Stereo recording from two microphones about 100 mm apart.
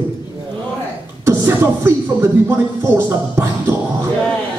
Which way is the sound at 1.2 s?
25° right (ahead or behind).